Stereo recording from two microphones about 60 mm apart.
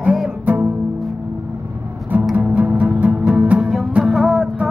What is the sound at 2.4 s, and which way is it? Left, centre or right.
Music, right.